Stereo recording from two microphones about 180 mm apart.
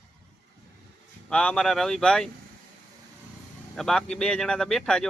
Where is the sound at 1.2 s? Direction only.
5° left (ahead or behind).